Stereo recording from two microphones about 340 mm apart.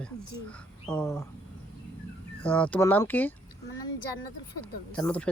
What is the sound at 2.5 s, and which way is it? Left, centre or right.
Speech, centre.